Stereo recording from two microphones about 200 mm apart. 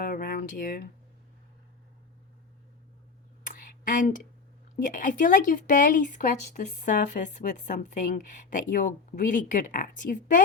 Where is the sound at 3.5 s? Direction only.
40° left (ahead or behind).